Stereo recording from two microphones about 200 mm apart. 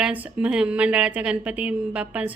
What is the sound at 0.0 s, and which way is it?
Speech, 5° right (ahead or behind).